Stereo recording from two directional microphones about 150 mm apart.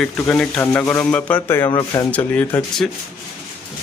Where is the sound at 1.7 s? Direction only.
25° left (ahead or behind).